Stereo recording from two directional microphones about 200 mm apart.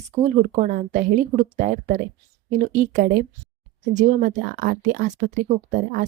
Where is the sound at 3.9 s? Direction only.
40° right (ahead or behind).